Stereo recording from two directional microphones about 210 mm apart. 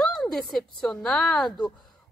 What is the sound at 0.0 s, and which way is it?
Speech, centre (ahead or behind).